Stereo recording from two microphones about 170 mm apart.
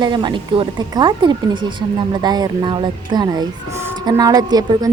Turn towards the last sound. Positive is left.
turn(degrees=-20)  # may be behind; listen again after turning